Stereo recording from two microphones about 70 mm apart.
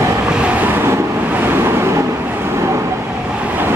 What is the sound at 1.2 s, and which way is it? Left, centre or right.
Vehicle, right.